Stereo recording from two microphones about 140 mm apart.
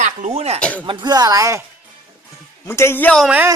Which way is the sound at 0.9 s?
30° right (ahead or behind).